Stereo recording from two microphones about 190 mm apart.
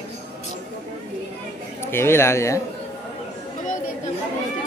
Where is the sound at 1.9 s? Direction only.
10° left (ahead or behind).